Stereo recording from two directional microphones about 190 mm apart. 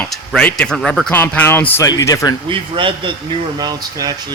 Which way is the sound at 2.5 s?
25° right (ahead or behind).